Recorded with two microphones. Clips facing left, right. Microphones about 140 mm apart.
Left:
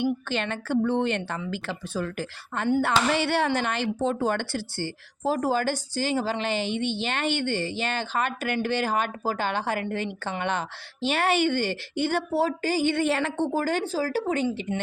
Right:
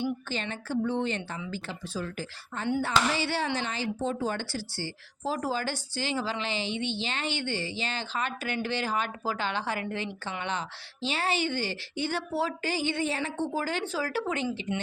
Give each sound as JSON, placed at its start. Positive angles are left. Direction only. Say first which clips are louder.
{"t": 0.0, "sound": "a woman's voice", "louder": "left 5 dB", "side_deg": 65}
{"t": 13.5, "sound": "speech", "louder": "left 5 dB", "side_deg": 45}